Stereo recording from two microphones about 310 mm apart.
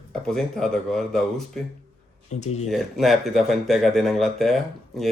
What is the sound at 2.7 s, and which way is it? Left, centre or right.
Speech, centre.